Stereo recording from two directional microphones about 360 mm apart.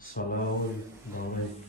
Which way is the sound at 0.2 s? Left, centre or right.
Left.